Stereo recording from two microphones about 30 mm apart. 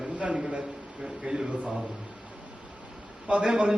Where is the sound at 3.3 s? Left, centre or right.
Right.